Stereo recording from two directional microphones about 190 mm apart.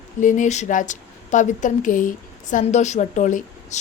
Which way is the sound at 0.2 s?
40° left (ahead or behind).